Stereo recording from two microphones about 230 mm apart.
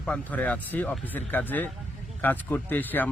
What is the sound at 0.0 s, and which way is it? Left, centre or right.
Speech, centre.